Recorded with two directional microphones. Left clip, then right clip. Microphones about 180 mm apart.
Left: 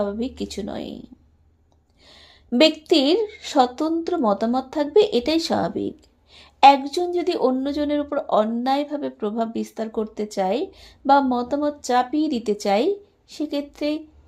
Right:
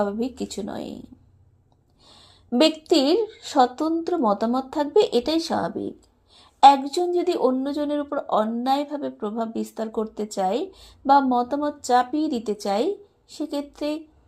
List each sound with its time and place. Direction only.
0.0 s speech: 5° left (ahead or behind)
6.3 s a sound: 20° left (ahead or behind)
6.8 s speech: 15° left (ahead or behind)